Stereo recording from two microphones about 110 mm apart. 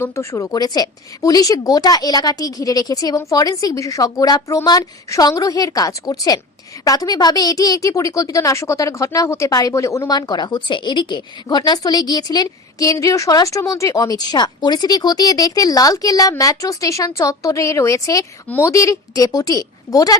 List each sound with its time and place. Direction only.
0.0 s a woman's voice: 25° left (ahead or behind)